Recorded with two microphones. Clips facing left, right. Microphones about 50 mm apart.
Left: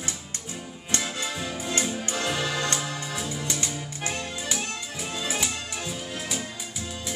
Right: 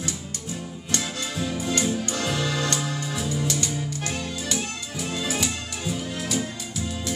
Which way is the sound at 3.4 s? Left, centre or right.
Left.